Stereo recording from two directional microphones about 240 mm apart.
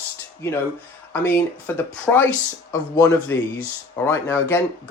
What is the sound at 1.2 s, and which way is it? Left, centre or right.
Speech, centre.